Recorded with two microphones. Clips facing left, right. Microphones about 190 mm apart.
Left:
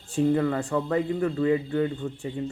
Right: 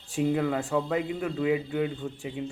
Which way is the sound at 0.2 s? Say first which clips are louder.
Left 3 dB; 10° right (ahead or behind).